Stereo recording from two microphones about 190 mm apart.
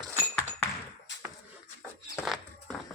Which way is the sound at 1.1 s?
70° left (ahead or behind).